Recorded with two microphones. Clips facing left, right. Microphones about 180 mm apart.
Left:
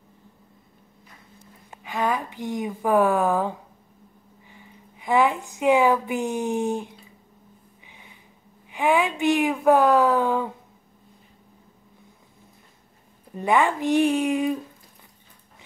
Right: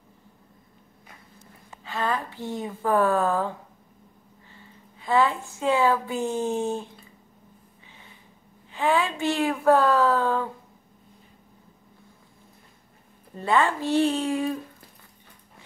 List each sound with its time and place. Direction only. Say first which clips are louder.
1.8 s a woman's voice: left 3 dB; 15° left (ahead or behind)
7.8 s a sound: even; 15° left (ahead or behind)
8.6 s speech: left 2 dB; 15° left (ahead or behind)
13.4 s speech: left 2 dB; 15° left (ahead or behind)